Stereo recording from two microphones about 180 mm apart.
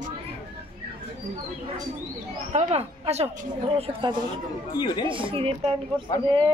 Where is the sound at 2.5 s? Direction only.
35° right (ahead or behind).